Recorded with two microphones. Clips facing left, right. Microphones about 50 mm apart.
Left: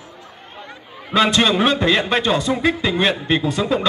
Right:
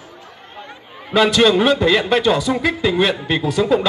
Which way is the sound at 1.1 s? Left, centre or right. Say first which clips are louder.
Right 1 dB; left.